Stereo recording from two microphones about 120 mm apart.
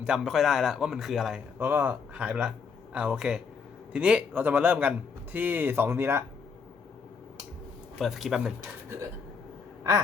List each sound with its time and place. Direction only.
0.0 s a man's voice: 5° right (ahead or behind)
1.5 s speech: 20° right (ahead or behind)
7.9 s a man's voice: centre (ahead or behind)